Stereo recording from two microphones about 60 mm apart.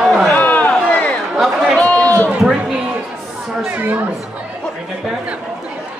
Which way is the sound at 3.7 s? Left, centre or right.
Right.